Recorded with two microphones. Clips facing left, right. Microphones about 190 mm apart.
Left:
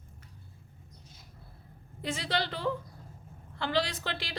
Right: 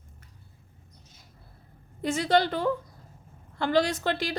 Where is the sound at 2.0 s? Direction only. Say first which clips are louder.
Right 9 dB; 45° right (ahead or behind).